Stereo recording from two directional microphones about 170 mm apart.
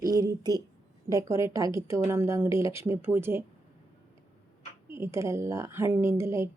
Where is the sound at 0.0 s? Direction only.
20° right (ahead or behind).